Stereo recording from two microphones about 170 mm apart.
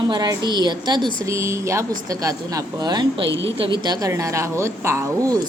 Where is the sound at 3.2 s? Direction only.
90° right.